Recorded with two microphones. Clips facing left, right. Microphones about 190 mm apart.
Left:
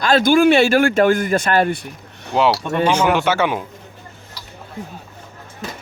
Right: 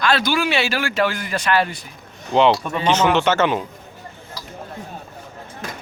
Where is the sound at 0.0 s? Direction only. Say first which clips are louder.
Left 7 dB; 45° left (ahead or behind).